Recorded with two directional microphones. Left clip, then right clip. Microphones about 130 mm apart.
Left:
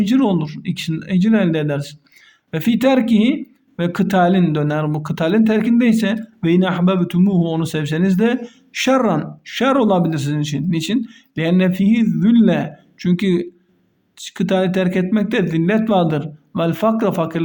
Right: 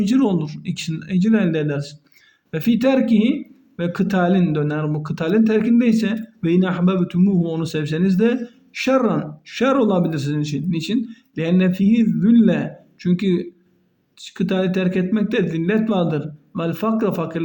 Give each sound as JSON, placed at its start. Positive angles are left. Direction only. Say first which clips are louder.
{"t": 0.0, "sound": "a man's voice", "louder": "left 2 dB", "side_deg": 30}